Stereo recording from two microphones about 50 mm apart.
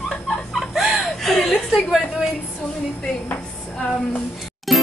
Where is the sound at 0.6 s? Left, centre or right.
Centre.